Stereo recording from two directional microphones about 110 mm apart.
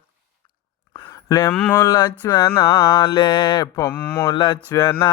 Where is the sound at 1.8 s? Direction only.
35° left (ahead or behind).